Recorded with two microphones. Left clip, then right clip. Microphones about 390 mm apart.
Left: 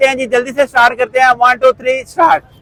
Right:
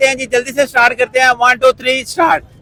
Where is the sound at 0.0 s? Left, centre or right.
Left.